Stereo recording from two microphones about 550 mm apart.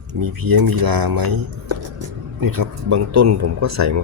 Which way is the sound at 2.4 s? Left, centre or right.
Right.